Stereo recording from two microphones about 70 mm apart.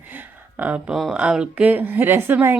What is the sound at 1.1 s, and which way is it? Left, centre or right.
Speech, centre.